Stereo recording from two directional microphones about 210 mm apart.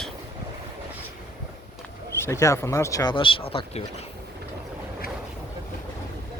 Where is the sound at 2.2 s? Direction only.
15° left (ahead or behind); by 4.1 s 30° left (ahead or behind).